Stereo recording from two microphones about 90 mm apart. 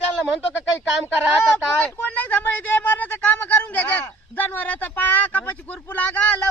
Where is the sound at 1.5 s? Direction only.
15° left (ahead or behind).